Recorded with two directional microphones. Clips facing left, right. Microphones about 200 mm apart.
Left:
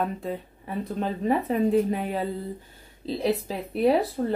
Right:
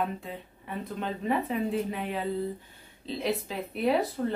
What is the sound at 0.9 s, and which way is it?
Speech, 40° left (ahead or behind).